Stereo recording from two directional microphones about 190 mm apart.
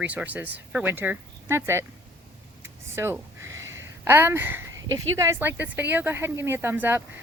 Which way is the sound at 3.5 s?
90° right.